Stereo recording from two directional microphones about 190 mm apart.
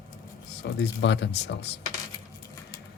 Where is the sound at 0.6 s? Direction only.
65° left (ahead or behind).